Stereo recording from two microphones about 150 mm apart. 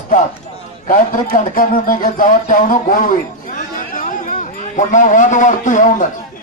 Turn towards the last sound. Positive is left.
turn(degrees=60)  # may be behind; listen again after turning